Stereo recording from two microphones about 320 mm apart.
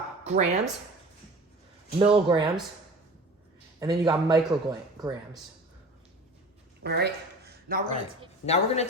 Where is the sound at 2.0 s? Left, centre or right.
Centre.